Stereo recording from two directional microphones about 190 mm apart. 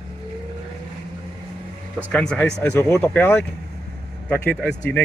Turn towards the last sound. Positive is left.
turn(degrees=5)  # may be behind; listen again after turning